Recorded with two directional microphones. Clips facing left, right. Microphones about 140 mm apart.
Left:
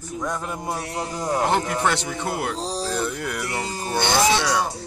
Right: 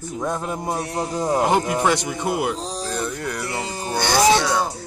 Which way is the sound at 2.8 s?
5° left (ahead or behind).